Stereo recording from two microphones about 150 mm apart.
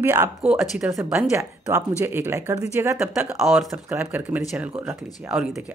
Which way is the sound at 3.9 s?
15° right (ahead or behind).